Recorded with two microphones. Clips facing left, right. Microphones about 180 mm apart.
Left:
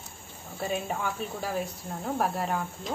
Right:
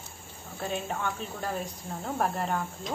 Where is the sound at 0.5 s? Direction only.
5° left (ahead or behind).